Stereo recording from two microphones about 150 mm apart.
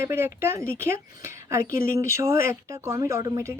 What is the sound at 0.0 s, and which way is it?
Speech, 15° right (ahead or behind).